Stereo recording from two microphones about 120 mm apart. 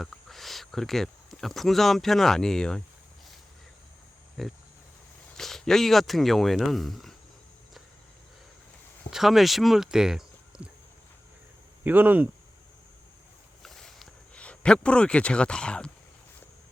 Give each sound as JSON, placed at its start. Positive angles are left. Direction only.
{"t": 0.0, "sound": "speech", "side_deg": 0}
{"t": 4.4, "sound": "speech", "side_deg": 0}
{"t": 9.0, "sound": "speech", "side_deg": -5}
{"t": 11.8, "sound": "speech", "side_deg": -15}
{"t": 13.6, "sound": "a sound", "side_deg": 5}